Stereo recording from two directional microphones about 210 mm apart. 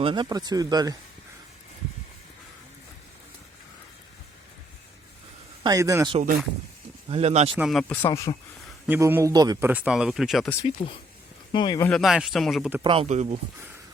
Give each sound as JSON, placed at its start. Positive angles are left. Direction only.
{"t": 0.0, "sound": "speech", "side_deg": -25}
{"t": 5.6, "sound": "speech", "side_deg": -15}
{"t": 7.1, "sound": "speech", "side_deg": -30}
{"t": 7.5, "sound": "speech", "side_deg": 0}
{"t": 8.0, "sound": "speech", "side_deg": 15}
{"t": 8.9, "sound": "speech", "side_deg": -10}
{"t": 10.8, "sound": "speech", "side_deg": 30}
{"t": 11.5, "sound": "speech", "side_deg": 20}
{"t": 11.9, "sound": "speech", "side_deg": 0}
{"t": 12.8, "sound": "speech", "side_deg": -25}